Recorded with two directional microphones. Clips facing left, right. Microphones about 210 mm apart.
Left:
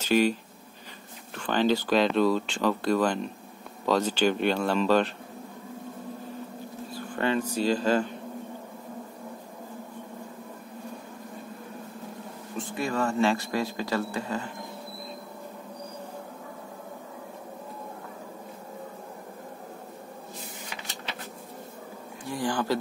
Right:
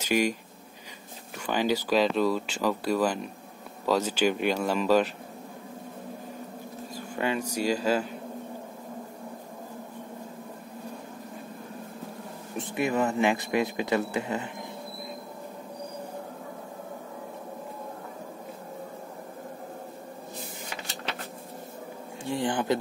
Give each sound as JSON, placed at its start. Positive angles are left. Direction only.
{"t": 0.0, "sound": "speech", "side_deg": -10}
{"t": 7.2, "sound": "speech", "side_deg": -10}
{"t": 12.5, "sound": "speech", "side_deg": -20}
{"t": 22.2, "sound": "speech", "side_deg": -25}